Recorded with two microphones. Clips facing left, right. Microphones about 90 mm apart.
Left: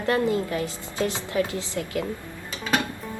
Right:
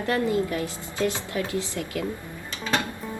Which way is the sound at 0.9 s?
20° left (ahead or behind).